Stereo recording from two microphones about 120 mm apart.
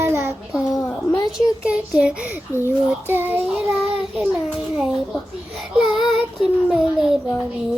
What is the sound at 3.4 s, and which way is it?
Child singing, 5° right (ahead or behind).